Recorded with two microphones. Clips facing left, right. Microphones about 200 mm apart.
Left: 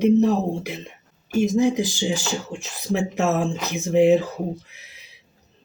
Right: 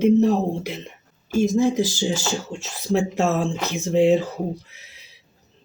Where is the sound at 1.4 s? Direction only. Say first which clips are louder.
Even; 15° left (ahead or behind).